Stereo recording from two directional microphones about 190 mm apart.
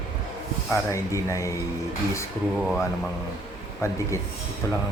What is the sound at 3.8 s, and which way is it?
Speech, 15° left (ahead or behind).